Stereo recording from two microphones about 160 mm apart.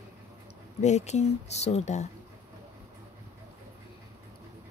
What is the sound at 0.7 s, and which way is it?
Speech, 45° left (ahead or behind).